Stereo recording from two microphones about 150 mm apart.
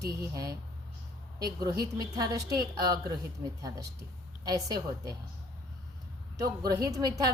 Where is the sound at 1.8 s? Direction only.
25° right (ahead or behind).